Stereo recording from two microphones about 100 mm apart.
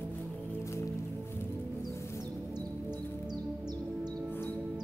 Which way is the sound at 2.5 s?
45° right (ahead or behind).